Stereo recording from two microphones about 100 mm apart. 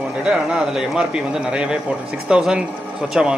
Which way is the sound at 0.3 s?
5° right (ahead or behind).